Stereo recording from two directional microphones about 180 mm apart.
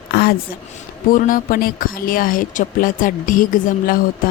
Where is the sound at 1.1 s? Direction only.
50° left (ahead or behind).